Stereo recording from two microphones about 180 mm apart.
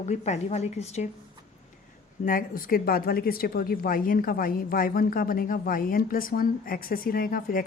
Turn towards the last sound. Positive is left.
turn(degrees=55)  # may be behind; listen again after turning